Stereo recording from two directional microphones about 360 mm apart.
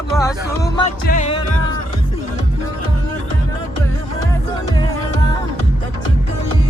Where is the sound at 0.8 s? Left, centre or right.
Left.